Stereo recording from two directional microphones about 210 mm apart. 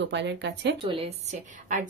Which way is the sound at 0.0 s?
55° right (ahead or behind).